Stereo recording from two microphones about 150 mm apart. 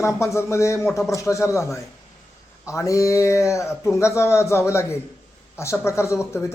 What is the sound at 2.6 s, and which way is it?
A man's voice, 20° left (ahead or behind).